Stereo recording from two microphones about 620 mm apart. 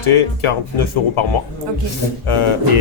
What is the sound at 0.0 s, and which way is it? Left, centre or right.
Speech, left.